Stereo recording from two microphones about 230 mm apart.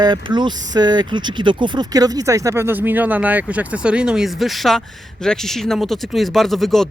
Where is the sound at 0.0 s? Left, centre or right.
Centre.